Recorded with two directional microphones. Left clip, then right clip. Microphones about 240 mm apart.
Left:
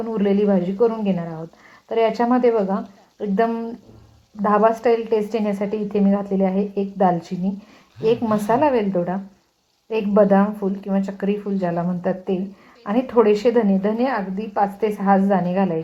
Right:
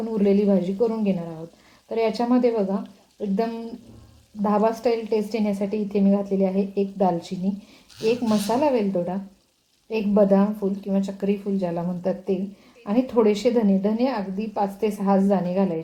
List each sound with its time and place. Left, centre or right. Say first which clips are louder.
0.1 s a woman's voice: left 1 dB; centre
4.4 s a woman's voice: left 5 dB; centre